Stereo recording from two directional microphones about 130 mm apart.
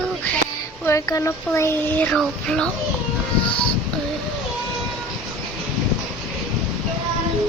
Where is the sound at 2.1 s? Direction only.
5° left (ahead or behind).